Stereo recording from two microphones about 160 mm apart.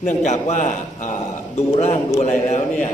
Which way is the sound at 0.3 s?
50° left (ahead or behind).